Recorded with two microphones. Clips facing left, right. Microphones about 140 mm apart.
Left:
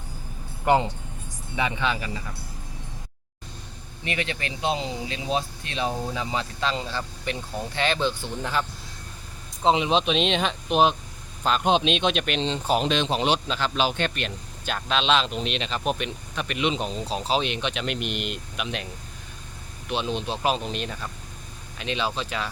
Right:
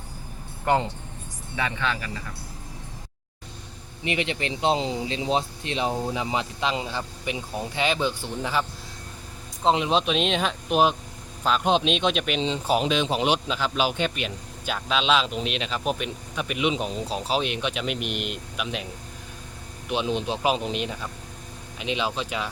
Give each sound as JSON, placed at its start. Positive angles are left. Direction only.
{"t": 0.6, "sound": "speech", "side_deg": 15}
{"t": 4.0, "sound": "speech", "side_deg": -20}
{"t": 9.6, "sound": "speech", "side_deg": 0}
{"t": 19.9, "sound": "speech", "side_deg": -15}